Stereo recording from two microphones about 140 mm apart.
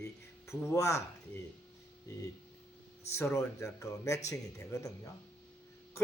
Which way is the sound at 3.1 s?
20° left (ahead or behind).